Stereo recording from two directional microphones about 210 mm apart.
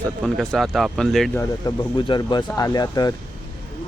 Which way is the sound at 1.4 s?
20° left (ahead or behind).